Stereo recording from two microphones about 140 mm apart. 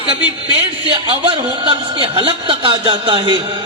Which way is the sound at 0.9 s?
40° right (ahead or behind).